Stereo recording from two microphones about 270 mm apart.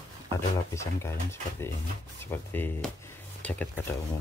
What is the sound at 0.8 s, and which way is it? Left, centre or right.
Speech, centre.